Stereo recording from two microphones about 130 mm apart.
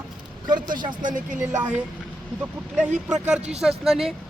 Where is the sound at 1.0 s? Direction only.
85° right.